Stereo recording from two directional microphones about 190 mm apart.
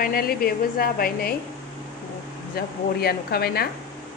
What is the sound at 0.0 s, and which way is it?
A woman's voice, 50° left (ahead or behind).